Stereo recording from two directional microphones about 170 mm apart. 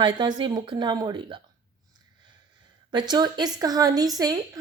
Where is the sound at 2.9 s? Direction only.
25° right (ahead or behind).